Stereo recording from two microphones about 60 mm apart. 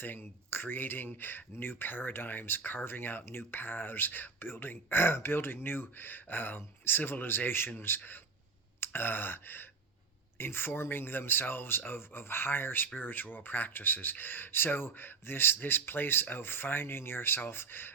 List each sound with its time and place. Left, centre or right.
0.0 s speech: left
8.8 s gasp: left
10.3 s speech: left